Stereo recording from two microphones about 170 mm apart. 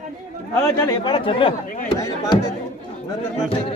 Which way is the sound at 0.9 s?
25° left (ahead or behind).